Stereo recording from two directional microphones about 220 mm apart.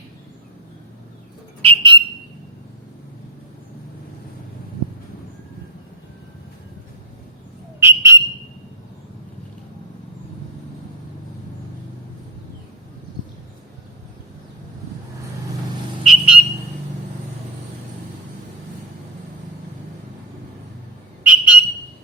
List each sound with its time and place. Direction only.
1.6 s bird: 20° right (ahead or behind)
7.8 s whistle: 10° right (ahead or behind)
16.0 s a sound: 5° right (ahead or behind)
21.2 s whistle: 5° right (ahead or behind)